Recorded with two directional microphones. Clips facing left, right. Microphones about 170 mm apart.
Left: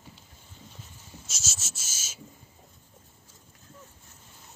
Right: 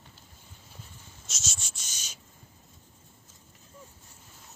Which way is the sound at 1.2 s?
Centre (ahead or behind).